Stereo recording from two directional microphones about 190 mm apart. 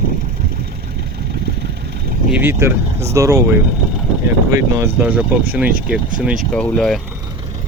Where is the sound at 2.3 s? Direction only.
10° right (ahead or behind); by 7.0 s 5° left (ahead or behind).